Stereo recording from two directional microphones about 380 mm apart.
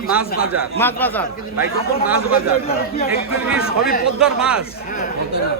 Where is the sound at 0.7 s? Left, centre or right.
Centre.